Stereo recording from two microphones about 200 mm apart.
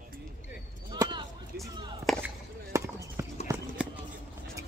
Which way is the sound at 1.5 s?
55° right (ahead or behind).